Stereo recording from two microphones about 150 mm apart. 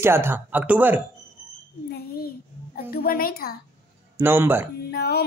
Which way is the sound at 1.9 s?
90° left.